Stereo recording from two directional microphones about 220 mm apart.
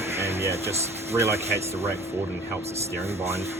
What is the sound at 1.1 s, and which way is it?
Speech, 10° right (ahead or behind).